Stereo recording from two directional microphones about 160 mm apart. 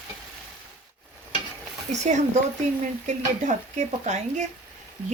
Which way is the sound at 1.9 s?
45° right (ahead or behind).